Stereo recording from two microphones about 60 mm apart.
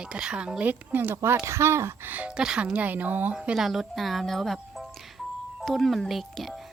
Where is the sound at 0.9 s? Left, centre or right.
Right.